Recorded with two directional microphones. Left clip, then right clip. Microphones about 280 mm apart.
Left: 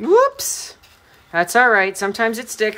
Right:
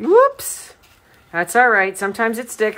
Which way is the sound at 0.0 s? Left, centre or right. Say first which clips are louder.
Right 1 dB; centre.